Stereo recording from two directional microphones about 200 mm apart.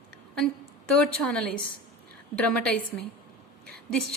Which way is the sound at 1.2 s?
5° left (ahead or behind).